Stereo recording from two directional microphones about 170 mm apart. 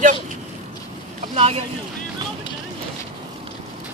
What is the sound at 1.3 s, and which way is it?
Speech, 40° right (ahead or behind).